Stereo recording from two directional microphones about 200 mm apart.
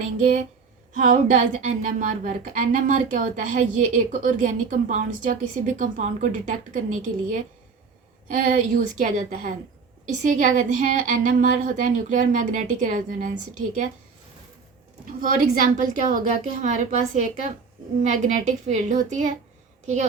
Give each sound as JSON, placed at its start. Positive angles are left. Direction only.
{"t": 0.9, "sound": "a woman's voice", "side_deg": -40}
{"t": 15.2, "sound": "a woman's voice", "side_deg": -45}